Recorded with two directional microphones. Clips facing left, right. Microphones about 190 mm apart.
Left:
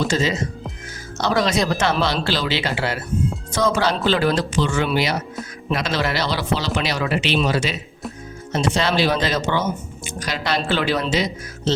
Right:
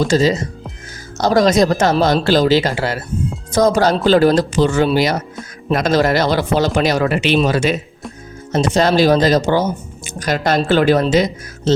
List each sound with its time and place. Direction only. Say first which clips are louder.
0.1 s speech: right 7 dB; 40° right (ahead or behind)